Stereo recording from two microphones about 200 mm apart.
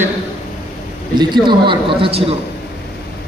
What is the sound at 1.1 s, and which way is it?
A man's voice, 20° right (ahead or behind).